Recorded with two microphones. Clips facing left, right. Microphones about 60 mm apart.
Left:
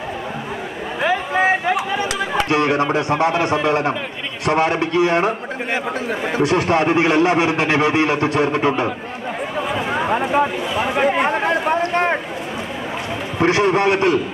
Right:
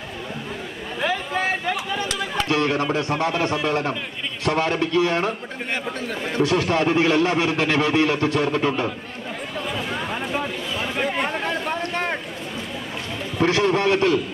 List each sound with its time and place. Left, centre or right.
1.0 s a sound: centre
1.9 s chatter: centre
2.4 s a man's voice: left
6.4 s a man's voice: left
9.6 s a sound: left
13.4 s a man's voice: left